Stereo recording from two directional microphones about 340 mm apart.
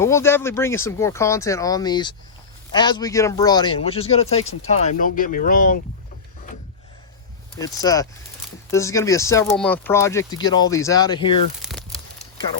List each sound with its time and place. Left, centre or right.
0.0 s speech: centre; by 5.8 s left
7.6 s speech: centre
11.6 s crumpling: centre